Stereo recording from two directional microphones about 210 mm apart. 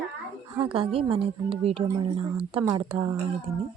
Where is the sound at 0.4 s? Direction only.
25° right (ahead or behind).